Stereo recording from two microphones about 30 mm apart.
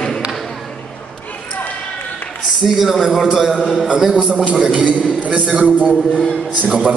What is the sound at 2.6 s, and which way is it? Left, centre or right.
Speech, centre.